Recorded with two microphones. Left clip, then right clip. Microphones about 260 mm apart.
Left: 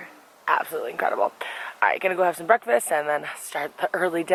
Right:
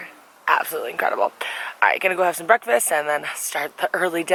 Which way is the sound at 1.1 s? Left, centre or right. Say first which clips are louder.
Right 2 dB; left.